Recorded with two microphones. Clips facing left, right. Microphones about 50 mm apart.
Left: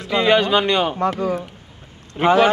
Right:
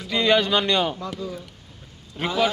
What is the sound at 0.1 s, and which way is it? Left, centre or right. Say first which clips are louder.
Speech: left 4 dB; centre.